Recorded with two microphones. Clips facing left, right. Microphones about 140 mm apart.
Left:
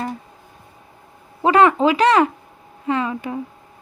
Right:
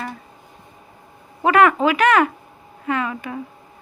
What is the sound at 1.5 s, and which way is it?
Speech, 30° left (ahead or behind).